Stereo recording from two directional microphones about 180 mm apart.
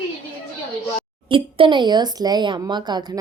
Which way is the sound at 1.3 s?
30° right (ahead or behind).